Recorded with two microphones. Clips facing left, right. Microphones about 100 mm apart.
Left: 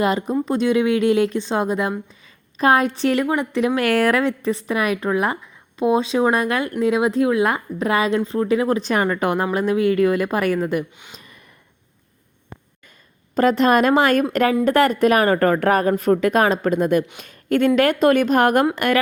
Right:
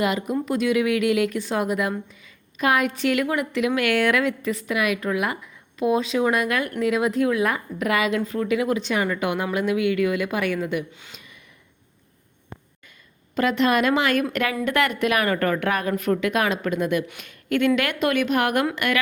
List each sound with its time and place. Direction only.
0.0 s speech: 35° left (ahead or behind)
11.1 s a sound: 40° left (ahead or behind)
13.3 s speech: 40° left (ahead or behind)